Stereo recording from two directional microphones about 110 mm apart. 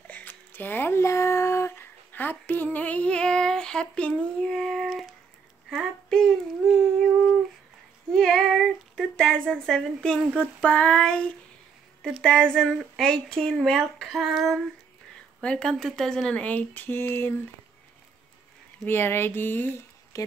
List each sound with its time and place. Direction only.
0.0 s speech: 15° left (ahead or behind)
8.1 s speech: 5° left (ahead or behind)
18.9 s a sound: 20° left (ahead or behind)
20.1 s speech: 30° left (ahead or behind)